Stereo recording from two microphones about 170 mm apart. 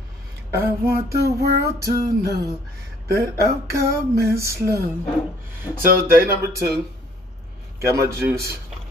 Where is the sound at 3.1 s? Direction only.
15° right (ahead or behind).